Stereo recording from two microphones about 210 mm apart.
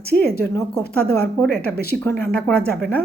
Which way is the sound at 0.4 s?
10° left (ahead or behind).